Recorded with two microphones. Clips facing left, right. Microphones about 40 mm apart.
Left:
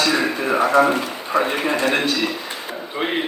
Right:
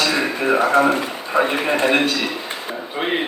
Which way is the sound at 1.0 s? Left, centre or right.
Right.